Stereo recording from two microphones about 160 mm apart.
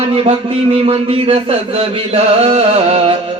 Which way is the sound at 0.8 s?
35° right (ahead or behind).